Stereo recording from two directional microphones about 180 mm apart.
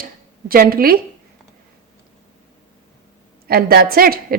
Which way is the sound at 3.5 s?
55° right (ahead or behind).